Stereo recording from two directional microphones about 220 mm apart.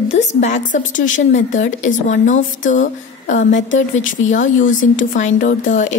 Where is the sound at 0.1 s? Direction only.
30° left (ahead or behind).